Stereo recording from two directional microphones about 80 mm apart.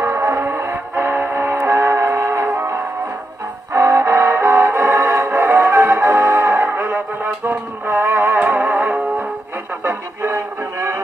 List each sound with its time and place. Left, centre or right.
0.0 s music: right
9.8 s music: right